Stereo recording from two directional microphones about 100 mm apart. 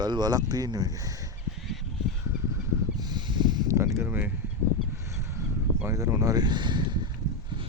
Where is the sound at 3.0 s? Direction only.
45° right (ahead or behind).